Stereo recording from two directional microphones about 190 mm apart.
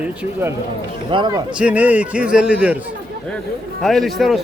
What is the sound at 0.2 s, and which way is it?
Speech, 10° right (ahead or behind).